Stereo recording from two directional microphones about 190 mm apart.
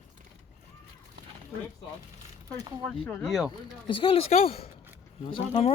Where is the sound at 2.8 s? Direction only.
5° left (ahead or behind).